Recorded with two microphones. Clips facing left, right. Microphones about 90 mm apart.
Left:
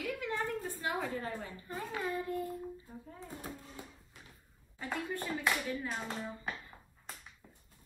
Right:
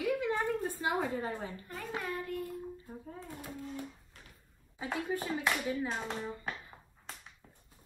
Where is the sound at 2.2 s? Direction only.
25° left (ahead or behind).